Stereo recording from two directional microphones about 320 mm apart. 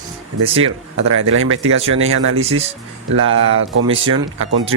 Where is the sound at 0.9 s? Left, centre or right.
Right.